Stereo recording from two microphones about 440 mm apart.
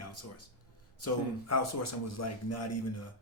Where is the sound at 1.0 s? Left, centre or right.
Left.